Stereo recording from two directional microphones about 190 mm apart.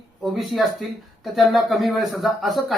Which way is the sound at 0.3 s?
Centre (ahead or behind).